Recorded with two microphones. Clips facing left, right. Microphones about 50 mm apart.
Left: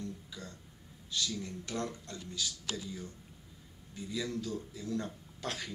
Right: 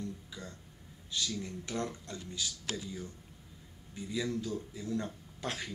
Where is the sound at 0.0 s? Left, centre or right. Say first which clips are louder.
Right 1 dB; centre.